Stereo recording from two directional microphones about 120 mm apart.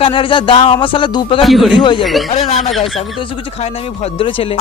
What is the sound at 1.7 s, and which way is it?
Speech, 40° left (ahead or behind).